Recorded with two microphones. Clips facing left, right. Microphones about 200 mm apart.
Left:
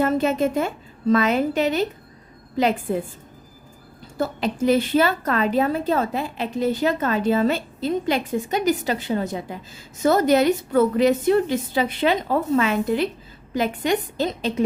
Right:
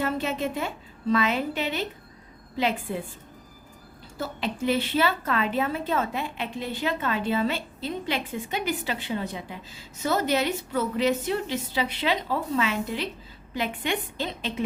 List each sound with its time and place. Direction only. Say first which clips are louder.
0.0 s a woman's voice: left 7 dB; 45° left (ahead or behind)
4.2 s a woman's voice: left 7 dB; 45° left (ahead or behind)